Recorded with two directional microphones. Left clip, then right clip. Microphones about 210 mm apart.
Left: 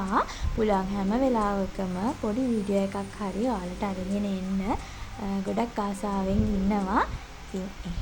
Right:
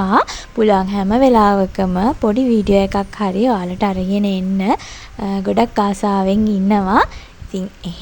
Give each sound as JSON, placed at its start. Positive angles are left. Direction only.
{"t": 0.0, "sound": "a woman's voice", "side_deg": -45}